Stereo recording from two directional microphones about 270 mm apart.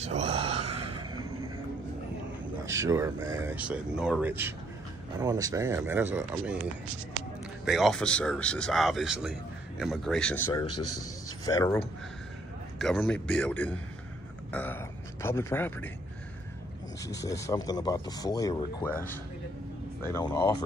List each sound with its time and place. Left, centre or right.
0.0 s speech: right
0.6 s a sound: right
2.6 s speech: centre
10.9 s a man's voice: left
11.4 s a man's voice: centre
17.0 s speech: centre